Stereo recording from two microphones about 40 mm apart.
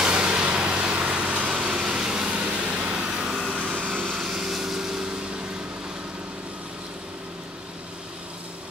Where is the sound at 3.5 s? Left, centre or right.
Right.